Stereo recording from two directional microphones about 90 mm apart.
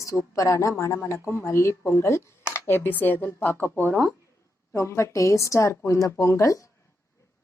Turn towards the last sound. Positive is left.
turn(degrees=35)  # may be behind; listen again after turning